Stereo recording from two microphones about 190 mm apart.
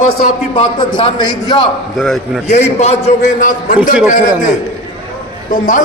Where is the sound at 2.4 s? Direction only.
35° left (ahead or behind).